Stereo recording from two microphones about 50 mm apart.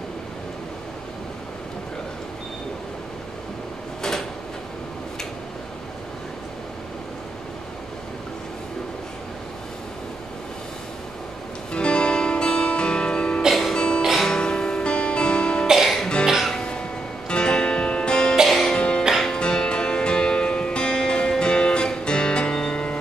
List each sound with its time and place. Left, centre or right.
11.7 s music: centre
15.6 s music: centre
16.5 s music: centre
18.5 s music: centre
18.8 s music: centre